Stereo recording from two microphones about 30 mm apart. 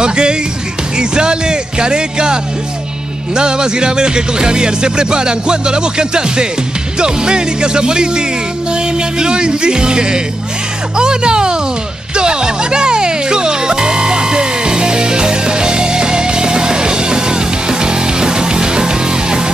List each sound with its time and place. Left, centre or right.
0.0 s music: right
3.3 s speech: right
12.2 s music: right